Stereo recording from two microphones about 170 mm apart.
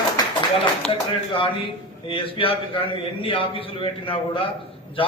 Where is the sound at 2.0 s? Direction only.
30° left (ahead or behind).